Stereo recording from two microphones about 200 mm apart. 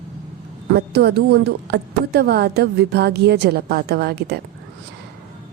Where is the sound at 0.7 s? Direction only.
55° right (ahead or behind).